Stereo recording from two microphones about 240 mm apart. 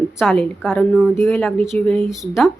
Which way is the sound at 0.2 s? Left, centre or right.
Centre.